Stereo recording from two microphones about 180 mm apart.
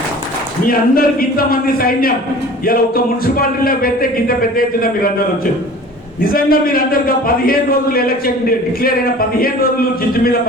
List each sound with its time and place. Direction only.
0.7 s speech: 55° left (ahead or behind)
6.3 s speech: 55° left (ahead or behind)